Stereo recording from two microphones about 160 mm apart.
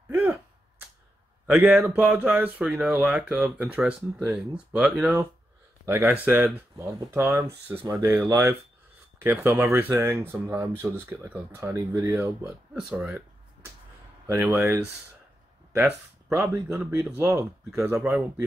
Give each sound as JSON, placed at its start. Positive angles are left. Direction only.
{"t": 0.1, "sound": "a sound", "side_deg": -10}
{"t": 1.5, "sound": "speech", "side_deg": -5}
{"t": 14.2, "sound": "speech", "side_deg": -15}
{"t": 17.6, "sound": "speech", "side_deg": -5}